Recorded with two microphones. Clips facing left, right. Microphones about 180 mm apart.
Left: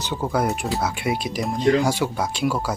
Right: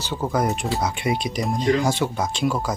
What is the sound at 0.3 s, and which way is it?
Speech, 5° left (ahead or behind).